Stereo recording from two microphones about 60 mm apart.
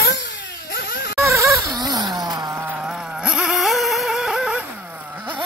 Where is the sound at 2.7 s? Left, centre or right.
Centre.